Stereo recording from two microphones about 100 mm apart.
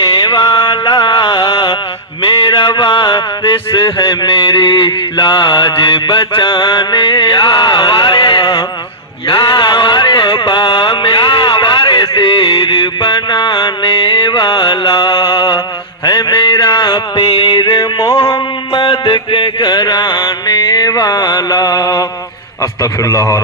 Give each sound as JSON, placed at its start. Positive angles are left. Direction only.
{"t": 0.6, "sound": "music", "side_deg": 45}
{"t": 2.4, "sound": "mantra", "side_deg": 55}
{"t": 7.8, "sound": "music", "side_deg": 45}
{"t": 9.2, "sound": "a sound", "side_deg": 60}
{"t": 13.0, "sound": "music", "side_deg": 45}
{"t": 18.7, "sound": "music", "side_deg": 60}
{"t": 22.8, "sound": "a man's voice", "side_deg": 35}